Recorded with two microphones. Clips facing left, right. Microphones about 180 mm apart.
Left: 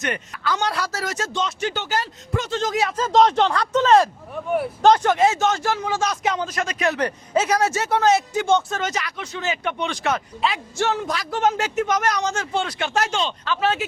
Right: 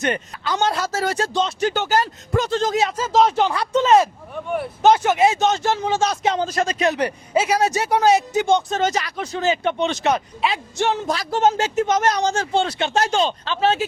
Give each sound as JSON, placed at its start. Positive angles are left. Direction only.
{"t": 0.0, "sound": "speech", "side_deg": -25}
{"t": 1.7, "sound": "speech", "side_deg": -45}
{"t": 2.9, "sound": "speech", "side_deg": -5}
{"t": 4.4, "sound": "speech", "side_deg": 5}
{"t": 4.9, "sound": "speech", "side_deg": -10}
{"t": 6.8, "sound": "speech", "side_deg": -15}
{"t": 8.8, "sound": "speech", "side_deg": -35}